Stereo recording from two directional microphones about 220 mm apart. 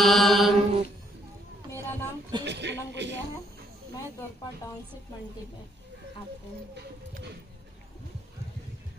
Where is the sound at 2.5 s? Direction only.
50° right (ahead or behind).